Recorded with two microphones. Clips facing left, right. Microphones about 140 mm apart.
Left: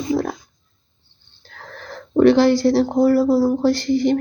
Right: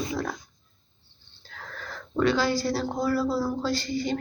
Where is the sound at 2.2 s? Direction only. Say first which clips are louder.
Left 11 dB; 70° left (ahead or behind).